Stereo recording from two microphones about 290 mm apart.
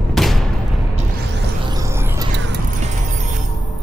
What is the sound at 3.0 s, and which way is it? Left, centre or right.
Music, right.